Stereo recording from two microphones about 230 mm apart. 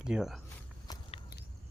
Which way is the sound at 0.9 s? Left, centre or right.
Centre.